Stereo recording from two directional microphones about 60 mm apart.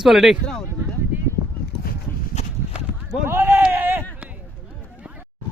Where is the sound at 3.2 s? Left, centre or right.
Right.